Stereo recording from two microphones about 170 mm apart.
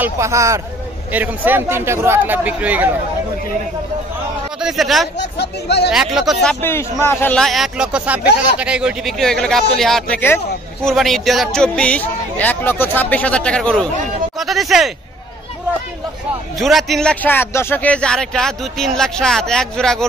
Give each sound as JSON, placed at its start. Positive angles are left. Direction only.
{"t": 0.0, "sound": "speech", "side_deg": -15}
{"t": 4.6, "sound": "speech", "side_deg": 0}
{"t": 5.4, "sound": "speech", "side_deg": 80}
{"t": 5.9, "sound": "speech", "side_deg": -5}
{"t": 6.6, "sound": "a man's voice", "side_deg": 15}
{"t": 7.4, "sound": "speech", "side_deg": 0}
{"t": 16.5, "sound": "speech", "side_deg": 0}